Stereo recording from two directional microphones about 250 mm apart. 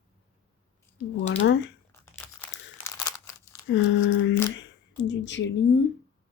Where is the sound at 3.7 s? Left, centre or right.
Left.